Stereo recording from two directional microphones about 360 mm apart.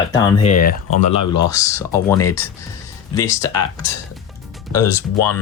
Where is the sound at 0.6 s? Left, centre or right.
Left.